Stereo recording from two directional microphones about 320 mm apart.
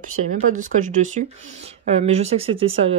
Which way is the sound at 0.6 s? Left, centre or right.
Right.